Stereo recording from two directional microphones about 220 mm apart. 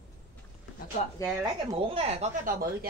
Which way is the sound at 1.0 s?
30° left (ahead or behind).